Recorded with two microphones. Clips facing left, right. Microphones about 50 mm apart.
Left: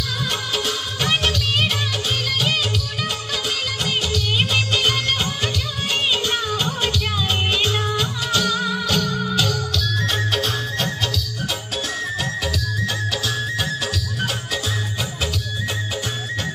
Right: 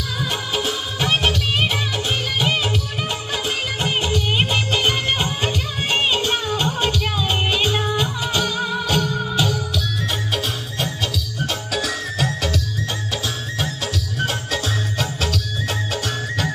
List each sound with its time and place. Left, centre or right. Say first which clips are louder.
1.0 s music of bollywood: right 1 dB; centre
4.4 s music: left 1 dB; right
6.6 s music: right 2 dB; centre
14.2 s music: right 2 dB; right